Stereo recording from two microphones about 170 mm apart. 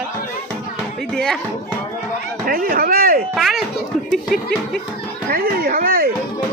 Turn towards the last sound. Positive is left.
turn(degrees=-60)  # may be behind; listen again after turning